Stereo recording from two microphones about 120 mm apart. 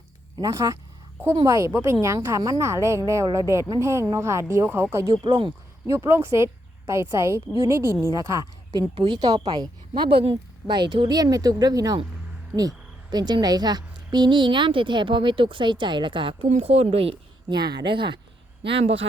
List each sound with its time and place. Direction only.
0.3 s a woman's voice: 30° right (ahead or behind)
5.2 s speech: 45° right (ahead or behind)
5.8 s a woman's voice: 20° right (ahead or behind); by 16.5 s 45° right (ahead or behind)
16.5 s speech: 60° right (ahead or behind)
17.5 s a woman's voice: 35° right (ahead or behind); by 19.0 s 50° right (ahead or behind)